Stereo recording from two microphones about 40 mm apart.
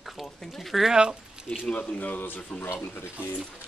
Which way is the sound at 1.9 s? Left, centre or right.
Left.